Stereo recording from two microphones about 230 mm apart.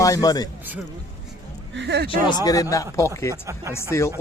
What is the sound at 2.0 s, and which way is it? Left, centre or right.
Speech, centre.